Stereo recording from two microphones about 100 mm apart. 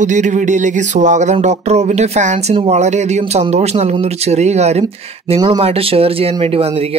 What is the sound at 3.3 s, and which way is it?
Speech, 90° right.